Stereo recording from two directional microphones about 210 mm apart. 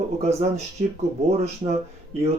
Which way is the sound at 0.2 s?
30° right (ahead or behind).